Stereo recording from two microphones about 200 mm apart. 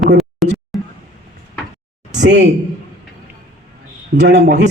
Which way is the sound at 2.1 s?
60° right (ahead or behind).